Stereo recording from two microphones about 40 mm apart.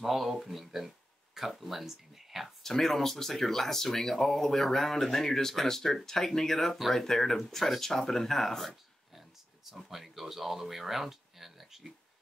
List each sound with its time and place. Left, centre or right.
0.0 s speech: centre
2.6 s speech: centre
9.7 s speech: centre